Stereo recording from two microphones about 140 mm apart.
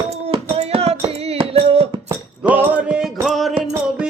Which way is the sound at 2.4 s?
10° right (ahead or behind).